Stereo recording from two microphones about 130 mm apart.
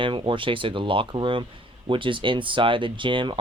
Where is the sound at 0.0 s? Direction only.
40° right (ahead or behind).